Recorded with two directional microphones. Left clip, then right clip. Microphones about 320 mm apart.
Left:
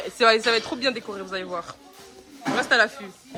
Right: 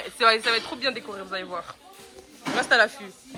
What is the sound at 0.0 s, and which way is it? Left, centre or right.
Speech, centre.